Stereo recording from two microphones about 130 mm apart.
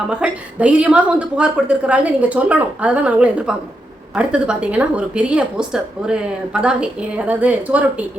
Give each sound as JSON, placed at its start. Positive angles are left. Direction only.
{"t": 0.1, "sound": "a woman's voice", "side_deg": -10}